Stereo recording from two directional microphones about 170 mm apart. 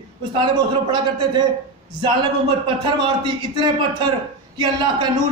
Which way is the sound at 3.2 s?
25° right (ahead or behind).